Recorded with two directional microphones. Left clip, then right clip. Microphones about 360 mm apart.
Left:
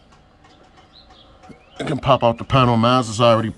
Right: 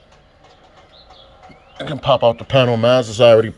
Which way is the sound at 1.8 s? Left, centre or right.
Left.